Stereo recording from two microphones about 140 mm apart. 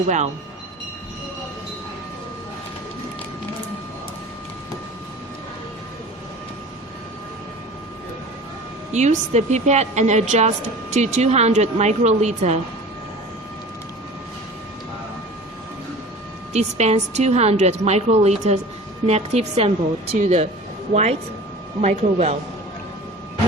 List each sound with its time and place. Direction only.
8.9 s a woman's voice: 55° right (ahead or behind)
16.5 s a woman's voice: 55° right (ahead or behind)